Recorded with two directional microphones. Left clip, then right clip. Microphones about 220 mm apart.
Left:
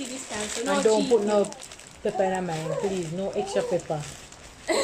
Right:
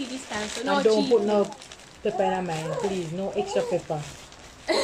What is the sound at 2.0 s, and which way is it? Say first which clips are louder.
Speech: right 1 dB; 10° left (ahead or behind).